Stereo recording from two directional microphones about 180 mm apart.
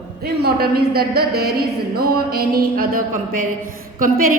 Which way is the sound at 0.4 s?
60° right (ahead or behind).